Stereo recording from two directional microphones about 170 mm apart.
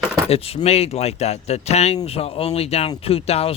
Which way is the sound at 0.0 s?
5° left (ahead or behind).